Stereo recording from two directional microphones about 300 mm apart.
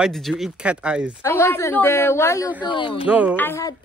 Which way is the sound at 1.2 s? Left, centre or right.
Centre.